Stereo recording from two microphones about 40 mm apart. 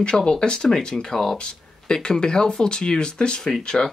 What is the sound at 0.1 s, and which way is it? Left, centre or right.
Speech, centre.